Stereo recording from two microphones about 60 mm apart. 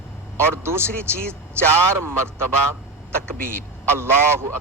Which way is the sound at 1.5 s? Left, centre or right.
Right.